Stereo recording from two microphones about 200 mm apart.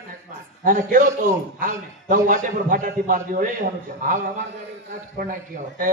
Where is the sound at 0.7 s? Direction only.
45° right (ahead or behind).